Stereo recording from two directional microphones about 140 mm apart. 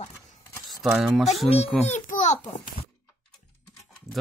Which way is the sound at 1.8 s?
55° left (ahead or behind).